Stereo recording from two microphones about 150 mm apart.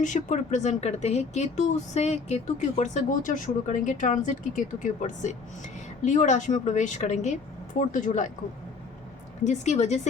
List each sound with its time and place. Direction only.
0.0 s speech: 55° left (ahead or behind)
9.4 s speech: 50° left (ahead or behind)